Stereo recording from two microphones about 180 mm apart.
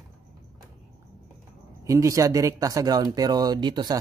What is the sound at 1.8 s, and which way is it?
Speech, 15° right (ahead or behind).